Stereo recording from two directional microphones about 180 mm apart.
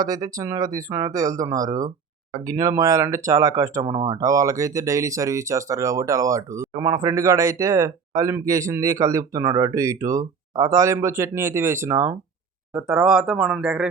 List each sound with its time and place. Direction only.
0.0 s speech: 20° right (ahead or behind)
12.7 s speech: 5° right (ahead or behind)